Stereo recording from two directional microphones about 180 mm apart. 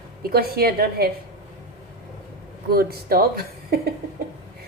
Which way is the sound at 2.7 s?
55° right (ahead or behind).